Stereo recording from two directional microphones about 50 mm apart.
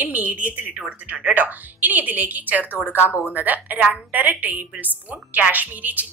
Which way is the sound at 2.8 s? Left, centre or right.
Left.